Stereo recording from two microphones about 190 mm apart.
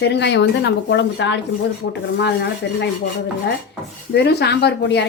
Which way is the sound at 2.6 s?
65° left (ahead or behind).